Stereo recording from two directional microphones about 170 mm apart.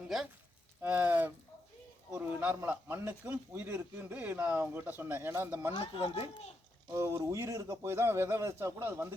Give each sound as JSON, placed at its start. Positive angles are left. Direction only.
{"t": 0.8, "sound": "speech", "side_deg": -10}
{"t": 5.7, "sound": "speech", "side_deg": 35}
{"t": 6.9, "sound": "speech", "side_deg": -20}